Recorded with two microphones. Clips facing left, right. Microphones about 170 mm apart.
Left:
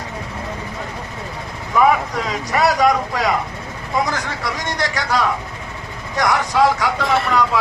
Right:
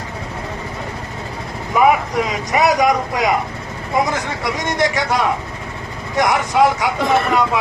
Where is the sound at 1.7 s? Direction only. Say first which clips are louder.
Right 1 dB; 15° right (ahead or behind).